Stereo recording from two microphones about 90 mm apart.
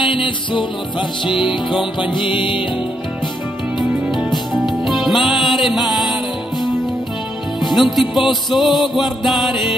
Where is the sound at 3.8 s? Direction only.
Centre (ahead or behind).